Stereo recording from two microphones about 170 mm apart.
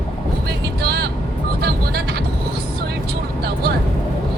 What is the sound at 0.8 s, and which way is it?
Vehicle, 65° right (ahead or behind).